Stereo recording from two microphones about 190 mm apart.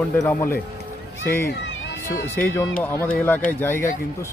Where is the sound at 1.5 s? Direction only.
70° left (ahead or behind).